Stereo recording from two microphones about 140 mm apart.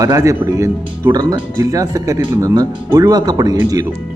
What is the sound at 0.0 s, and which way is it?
Speech, 25° right (ahead or behind).